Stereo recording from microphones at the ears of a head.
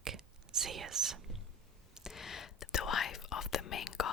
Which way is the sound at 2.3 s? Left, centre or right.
Left.